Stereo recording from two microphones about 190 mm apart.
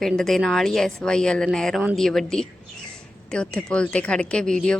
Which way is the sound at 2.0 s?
5° left (ahead or behind).